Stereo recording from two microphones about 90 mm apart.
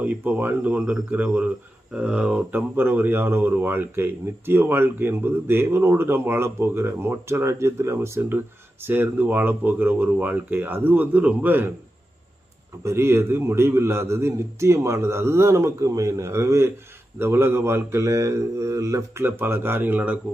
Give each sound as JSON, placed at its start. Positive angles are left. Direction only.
{"t": 0.0, "sound": "speech", "side_deg": -20}
{"t": 12.8, "sound": "a man's voice", "side_deg": -30}
{"t": 19.2, "sound": "speech", "side_deg": -25}